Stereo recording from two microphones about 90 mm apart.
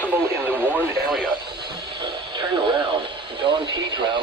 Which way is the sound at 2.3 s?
70° right (ahead or behind).